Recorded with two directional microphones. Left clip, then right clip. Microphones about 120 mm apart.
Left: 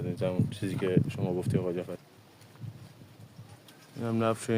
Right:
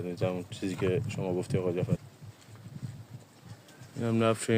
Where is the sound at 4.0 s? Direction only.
20° right (ahead or behind).